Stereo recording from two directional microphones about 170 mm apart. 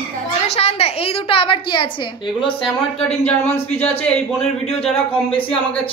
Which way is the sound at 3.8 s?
5° left (ahead or behind).